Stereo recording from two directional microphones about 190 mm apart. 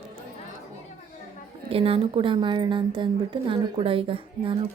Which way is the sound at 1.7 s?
30° right (ahead or behind).